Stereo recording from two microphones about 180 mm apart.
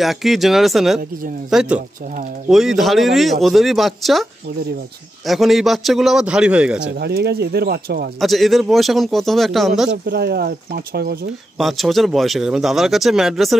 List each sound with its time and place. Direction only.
0.0 s speech: centre (ahead or behind)
7.0 s speech: 65° right (ahead or behind)
8.2 s speech: centre (ahead or behind)
10.0 s speech: 60° right (ahead or behind)
11.5 s speech: centre (ahead or behind)